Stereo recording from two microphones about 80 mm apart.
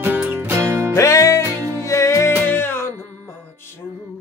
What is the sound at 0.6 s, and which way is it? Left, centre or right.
Music, right.